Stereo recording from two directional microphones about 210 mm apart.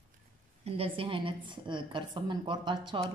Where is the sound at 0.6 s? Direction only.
25° right (ahead or behind).